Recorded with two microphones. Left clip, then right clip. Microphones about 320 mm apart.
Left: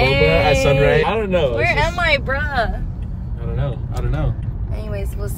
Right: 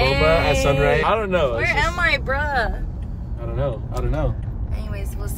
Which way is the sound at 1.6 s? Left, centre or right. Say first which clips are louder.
Left 2 dB; centre.